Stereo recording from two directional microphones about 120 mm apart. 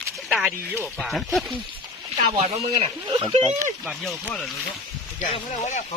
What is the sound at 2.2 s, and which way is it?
Speech, 55° right (ahead or behind).